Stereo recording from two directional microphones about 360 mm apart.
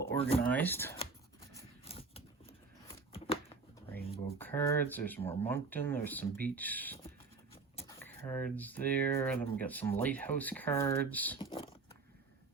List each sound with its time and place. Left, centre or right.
0.0 s speech: centre
1.5 s a sound: centre
4.4 s speech: centre